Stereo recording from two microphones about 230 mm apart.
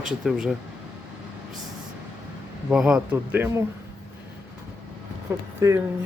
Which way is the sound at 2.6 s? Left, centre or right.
Centre.